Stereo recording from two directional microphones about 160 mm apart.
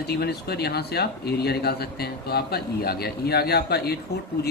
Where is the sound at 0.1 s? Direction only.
90° left.